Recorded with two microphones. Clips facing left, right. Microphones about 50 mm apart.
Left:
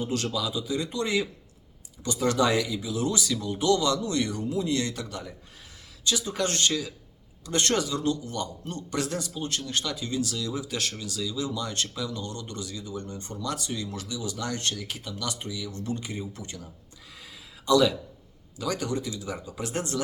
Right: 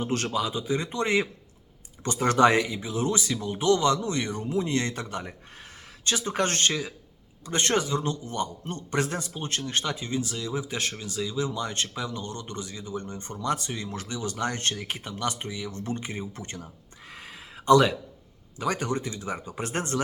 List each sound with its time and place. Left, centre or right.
0.0 s a man's voice: right
17.2 s a sound: right
18.6 s a man's voice: right